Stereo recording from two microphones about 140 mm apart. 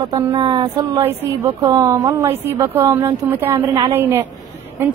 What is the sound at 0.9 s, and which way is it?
Speech, 25° right (ahead or behind).